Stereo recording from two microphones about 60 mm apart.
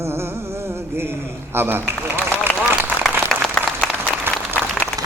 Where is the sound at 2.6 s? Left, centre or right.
Right.